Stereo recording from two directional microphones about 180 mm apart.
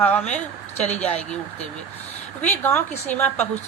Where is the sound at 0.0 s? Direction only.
10° left (ahead or behind).